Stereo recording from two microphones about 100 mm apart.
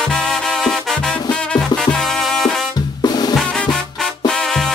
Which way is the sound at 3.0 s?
45° left (ahead or behind).